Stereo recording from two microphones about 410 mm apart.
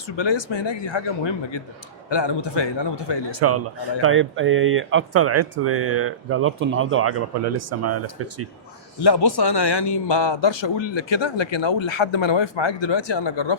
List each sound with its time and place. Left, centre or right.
0.2 s a man's voice: left
2.0 s a man's voice: left
3.4 s speech: right
9.0 s a man's voice: left